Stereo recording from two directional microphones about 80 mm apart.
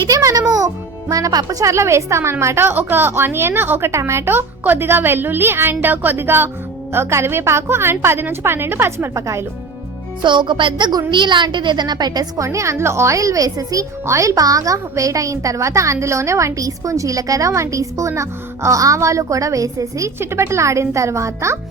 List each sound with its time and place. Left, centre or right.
0.1 s music: right
0.5 s a child's voice: right
10.2 s speech: right
11.1 s a woman's voice: right
12.5 s speech: right
20.1 s a woman's voice: right